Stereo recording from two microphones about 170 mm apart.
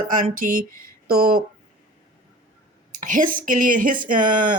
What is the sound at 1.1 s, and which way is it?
Speech, 65° right (ahead or behind).